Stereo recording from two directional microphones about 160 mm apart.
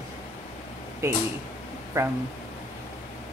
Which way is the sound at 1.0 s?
20° right (ahead or behind).